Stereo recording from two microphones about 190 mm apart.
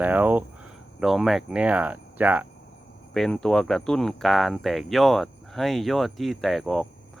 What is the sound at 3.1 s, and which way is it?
Speech, 5° left (ahead or behind).